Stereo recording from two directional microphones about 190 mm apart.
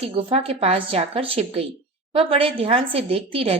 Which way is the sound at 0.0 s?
30° right (ahead or behind).